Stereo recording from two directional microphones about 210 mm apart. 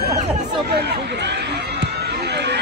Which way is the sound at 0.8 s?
50° right (ahead or behind).